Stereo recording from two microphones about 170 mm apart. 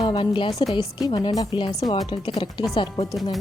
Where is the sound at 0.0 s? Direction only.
25° left (ahead or behind).